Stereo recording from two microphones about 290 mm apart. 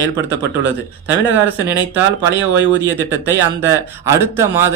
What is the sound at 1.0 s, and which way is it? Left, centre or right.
Speech, centre.